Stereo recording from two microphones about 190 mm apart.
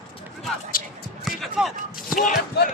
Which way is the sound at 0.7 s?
50° left (ahead or behind).